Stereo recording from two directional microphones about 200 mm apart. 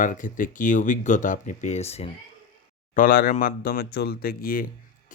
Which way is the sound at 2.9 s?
45° left (ahead or behind).